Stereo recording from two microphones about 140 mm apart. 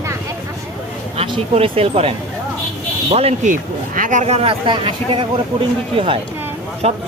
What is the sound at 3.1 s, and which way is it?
Speech, 45° right (ahead or behind).